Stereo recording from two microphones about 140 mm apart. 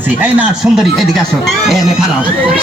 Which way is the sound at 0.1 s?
10° right (ahead or behind).